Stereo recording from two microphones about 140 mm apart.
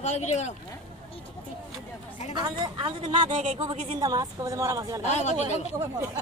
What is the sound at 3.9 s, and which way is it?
A woman's voice, 25° right (ahead or behind).